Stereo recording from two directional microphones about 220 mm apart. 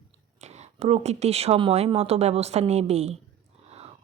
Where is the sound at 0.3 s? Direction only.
30° right (ahead or behind).